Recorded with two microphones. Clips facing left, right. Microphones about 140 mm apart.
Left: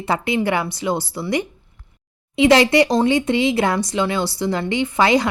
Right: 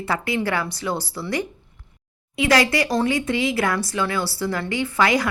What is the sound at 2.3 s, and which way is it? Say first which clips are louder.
Speech: left 6 dB; 25° left (ahead or behind).